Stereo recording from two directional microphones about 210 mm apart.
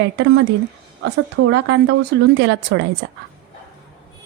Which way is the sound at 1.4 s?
60° right (ahead or behind).